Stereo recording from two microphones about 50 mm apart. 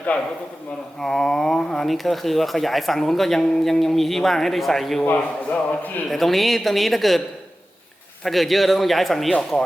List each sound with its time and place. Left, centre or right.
0.1 s a man's voice: left
1.0 s speech: centre
5.0 s a man's voice: left
6.1 s speech: centre
8.2 s speech: centre